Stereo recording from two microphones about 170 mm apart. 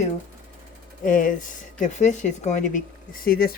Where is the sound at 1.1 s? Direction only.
50° left (ahead or behind).